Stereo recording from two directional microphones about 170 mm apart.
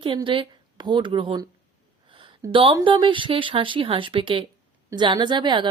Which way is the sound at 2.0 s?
30° right (ahead or behind).